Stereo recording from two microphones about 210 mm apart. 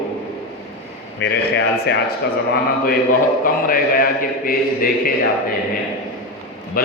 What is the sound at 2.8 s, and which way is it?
A man's voice, 40° left (ahead or behind).